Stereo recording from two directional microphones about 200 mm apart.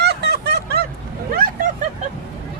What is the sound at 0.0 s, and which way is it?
Vehicle, 55° right (ahead or behind).